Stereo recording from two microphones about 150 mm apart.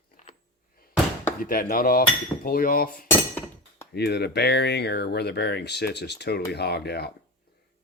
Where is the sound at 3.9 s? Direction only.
90° left.